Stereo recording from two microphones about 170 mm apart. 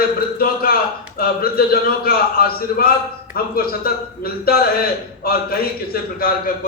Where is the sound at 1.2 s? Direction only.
60° left (ahead or behind).